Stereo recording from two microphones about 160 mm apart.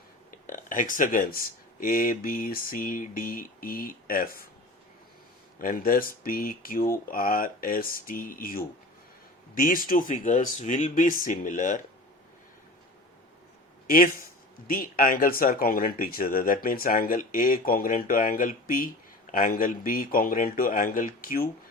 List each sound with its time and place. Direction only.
0.3 s a sound: 55° left (ahead or behind)
1.8 s speech: 60° left (ahead or behind)
5.5 s speech: 60° left (ahead or behind)
13.8 s speech: 60° left (ahead or behind)